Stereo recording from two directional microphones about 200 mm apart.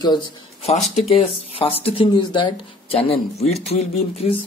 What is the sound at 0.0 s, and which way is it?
Speech, 25° left (ahead or behind).